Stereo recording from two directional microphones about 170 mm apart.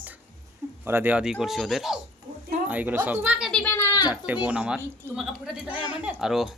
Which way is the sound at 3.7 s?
20° left (ahead or behind).